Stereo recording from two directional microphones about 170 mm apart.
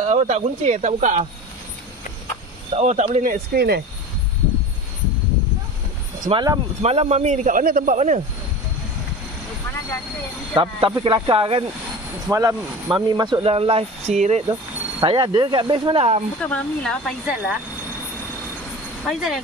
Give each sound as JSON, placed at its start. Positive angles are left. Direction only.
{"t": 0.0, "sound": "a man's voice", "side_deg": -40}
{"t": 2.7, "sound": "speech", "side_deg": -40}
{"t": 3.5, "sound": "speech", "side_deg": -70}
{"t": 6.2, "sound": "speech", "side_deg": -25}
{"t": 6.8, "sound": "a man's voice", "side_deg": -40}
{"t": 10.5, "sound": "speech", "side_deg": -30}
{"t": 12.3, "sound": "speech", "side_deg": -20}
{"t": 14.5, "sound": "speech", "side_deg": -25}
{"t": 16.3, "sound": "speech", "side_deg": 5}
{"t": 19.0, "sound": "speech", "side_deg": 0}